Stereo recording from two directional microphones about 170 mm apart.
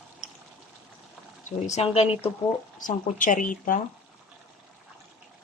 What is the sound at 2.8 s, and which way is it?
Speech, 50° left (ahead or behind).